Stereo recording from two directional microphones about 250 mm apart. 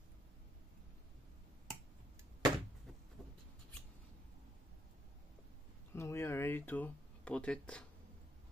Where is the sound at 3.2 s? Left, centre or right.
Centre.